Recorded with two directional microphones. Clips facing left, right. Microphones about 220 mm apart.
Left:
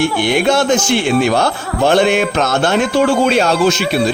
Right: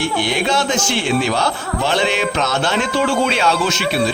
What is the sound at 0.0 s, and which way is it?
A man's voice, 55° left (ahead or behind).